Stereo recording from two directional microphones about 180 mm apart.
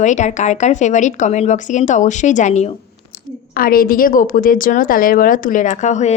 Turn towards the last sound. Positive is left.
turn(degrees=40)  # may be behind; listen again after turning